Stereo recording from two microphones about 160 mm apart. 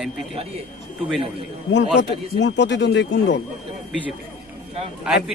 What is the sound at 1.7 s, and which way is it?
Speech, 90° left.